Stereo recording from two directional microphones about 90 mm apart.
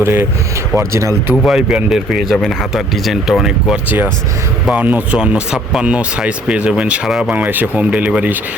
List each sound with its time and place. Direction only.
0.0 s speech: 25° right (ahead or behind)
0.8 s speech: 35° right (ahead or behind)
1.5 s speech: 5° right (ahead or behind)
3.8 s speech: 20° right (ahead or behind)